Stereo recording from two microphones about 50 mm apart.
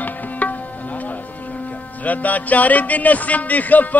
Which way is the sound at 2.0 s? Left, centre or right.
Left.